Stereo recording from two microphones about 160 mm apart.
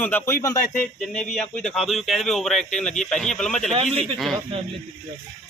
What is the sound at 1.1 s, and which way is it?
Speech, 5° left (ahead or behind).